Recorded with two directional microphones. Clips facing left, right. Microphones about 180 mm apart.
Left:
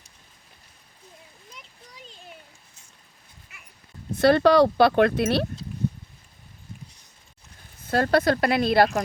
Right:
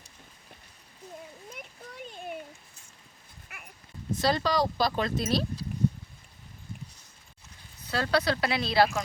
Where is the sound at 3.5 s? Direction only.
60° right (ahead or behind).